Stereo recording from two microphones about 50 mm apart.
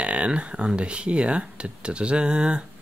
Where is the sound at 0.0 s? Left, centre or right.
Right.